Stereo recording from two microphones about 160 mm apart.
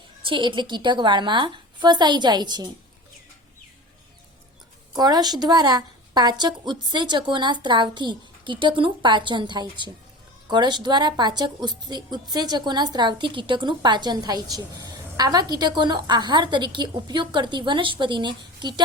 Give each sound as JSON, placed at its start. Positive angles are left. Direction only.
{"t": 0.3, "sound": "a woman's voice", "side_deg": -30}
{"t": 4.9, "sound": "a woman's voice", "side_deg": -25}